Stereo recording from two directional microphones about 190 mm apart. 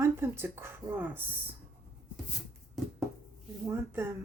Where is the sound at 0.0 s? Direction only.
10° right (ahead or behind).